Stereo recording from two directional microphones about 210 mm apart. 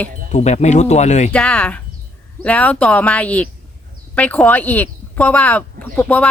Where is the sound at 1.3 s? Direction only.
5° left (ahead or behind).